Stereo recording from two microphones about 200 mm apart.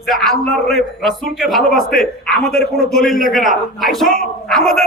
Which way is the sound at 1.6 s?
45° left (ahead or behind).